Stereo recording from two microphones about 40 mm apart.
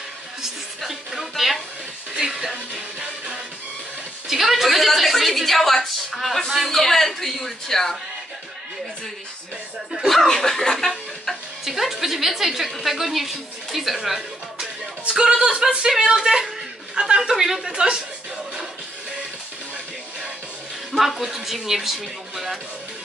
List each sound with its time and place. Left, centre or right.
0.4 s speech: centre
2.1 s speech: centre
4.3 s speech: centre
10.0 s speech: centre
10.9 s speech: centre
15.0 s speech: right
16.1 s speech: centre
20.9 s speech: centre